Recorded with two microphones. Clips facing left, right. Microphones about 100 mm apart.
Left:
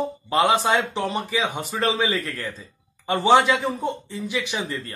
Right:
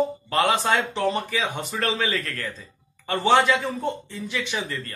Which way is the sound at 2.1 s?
10° left (ahead or behind).